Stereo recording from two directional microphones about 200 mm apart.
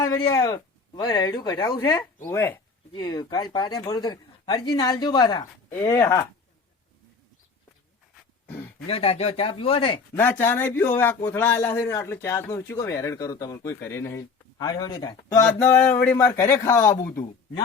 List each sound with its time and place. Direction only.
0.0 s a man's voice: 15° left (ahead or behind)
8.9 s speech: 30° left (ahead or behind)
10.2 s a man's voice: 10° left (ahead or behind)